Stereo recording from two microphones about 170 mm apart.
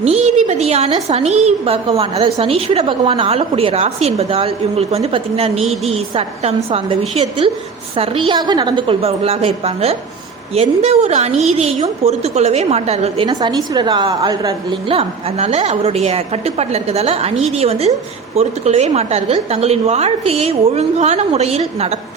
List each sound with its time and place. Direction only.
0.0 s a woman's voice: 40° right (ahead or behind)
13.2 s a woman's voice: 25° right (ahead or behind)
14.8 s a woman's voice: 35° right (ahead or behind)